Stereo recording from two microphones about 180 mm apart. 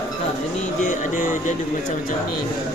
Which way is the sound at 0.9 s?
45° left (ahead or behind).